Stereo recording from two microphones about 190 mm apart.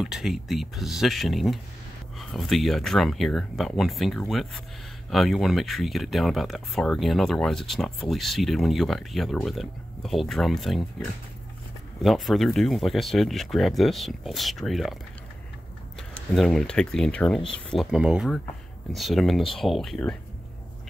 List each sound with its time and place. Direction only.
0.0 s speech: centre (ahead or behind)
16.0 s speech: centre (ahead or behind)